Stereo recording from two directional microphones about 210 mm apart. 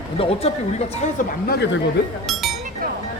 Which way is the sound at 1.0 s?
50° left (ahead or behind).